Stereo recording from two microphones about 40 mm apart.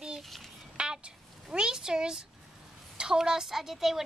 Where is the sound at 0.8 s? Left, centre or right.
Right.